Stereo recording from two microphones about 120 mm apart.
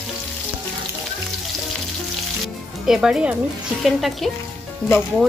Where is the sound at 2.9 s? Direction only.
5° right (ahead or behind).